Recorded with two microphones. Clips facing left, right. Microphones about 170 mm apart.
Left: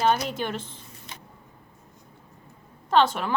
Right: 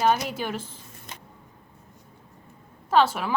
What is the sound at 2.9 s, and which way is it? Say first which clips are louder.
Speech: even; 5° right (ahead or behind).